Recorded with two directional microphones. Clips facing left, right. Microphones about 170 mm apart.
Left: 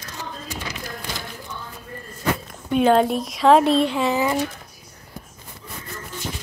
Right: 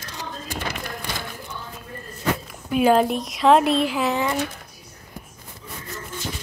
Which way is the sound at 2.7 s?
5° right (ahead or behind).